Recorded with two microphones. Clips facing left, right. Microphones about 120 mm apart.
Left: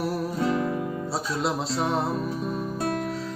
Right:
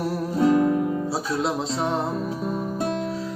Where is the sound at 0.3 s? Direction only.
40° right (ahead or behind).